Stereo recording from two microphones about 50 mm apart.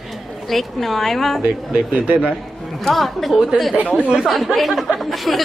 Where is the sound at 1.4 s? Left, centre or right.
Right.